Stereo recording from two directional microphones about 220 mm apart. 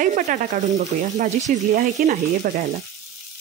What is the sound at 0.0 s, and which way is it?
Frying, 35° right (ahead or behind).